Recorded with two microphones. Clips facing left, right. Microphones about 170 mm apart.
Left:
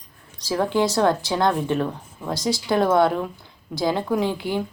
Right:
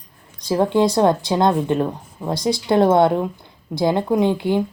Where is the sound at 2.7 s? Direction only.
25° right (ahead or behind).